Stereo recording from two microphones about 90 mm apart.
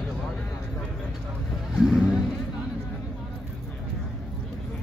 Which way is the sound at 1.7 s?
5° right (ahead or behind).